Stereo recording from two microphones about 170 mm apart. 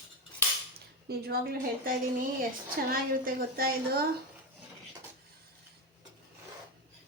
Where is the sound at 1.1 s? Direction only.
65° right (ahead or behind).